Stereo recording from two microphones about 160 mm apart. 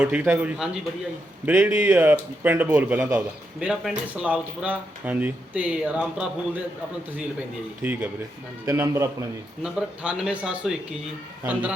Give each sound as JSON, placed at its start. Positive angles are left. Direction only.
{"t": 0.0, "sound": "a man's voice", "side_deg": -10}
{"t": 7.8, "sound": "a man's voice", "side_deg": -10}
{"t": 8.6, "sound": "a man's voice", "side_deg": -20}
{"t": 9.6, "sound": "speech", "side_deg": -5}